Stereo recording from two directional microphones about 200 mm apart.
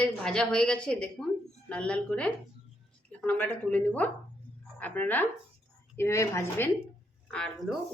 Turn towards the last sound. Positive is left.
turn(degrees=5)  # may be behind; listen again after turning